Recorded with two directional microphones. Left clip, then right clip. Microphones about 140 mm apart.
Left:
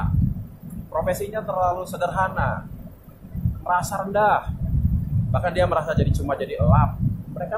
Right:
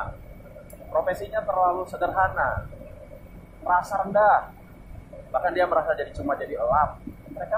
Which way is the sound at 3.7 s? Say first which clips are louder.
Even; 40° left (ahead or behind).